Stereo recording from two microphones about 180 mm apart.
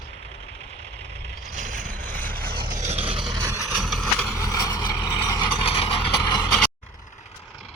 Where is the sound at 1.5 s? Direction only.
40° right (ahead or behind).